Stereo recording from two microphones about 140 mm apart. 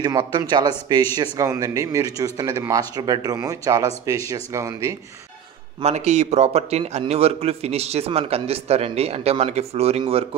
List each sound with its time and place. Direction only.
0.0 s a man's voice: 35° right (ahead or behind)
5.8 s a man's voice: 50° right (ahead or behind)